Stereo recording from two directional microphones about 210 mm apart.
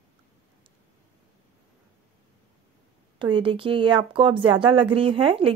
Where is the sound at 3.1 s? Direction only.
25° right (ahead or behind).